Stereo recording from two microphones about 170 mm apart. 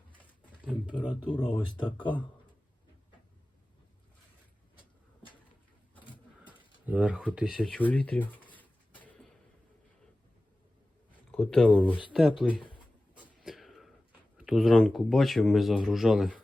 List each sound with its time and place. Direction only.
0.7 s speech: 5° right (ahead or behind)
1.3 s speech: 30° left (ahead or behind)
6.5 s a sound: 10° right (ahead or behind); by 9.3 s 10° left (ahead or behind)
11.3 s speech: 5° left (ahead or behind)
13.4 s a sound: centre (ahead or behind)
14.3 s speech: 5° right (ahead or behind)